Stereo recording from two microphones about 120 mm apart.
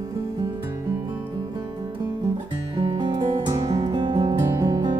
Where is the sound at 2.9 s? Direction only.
40° right (ahead or behind).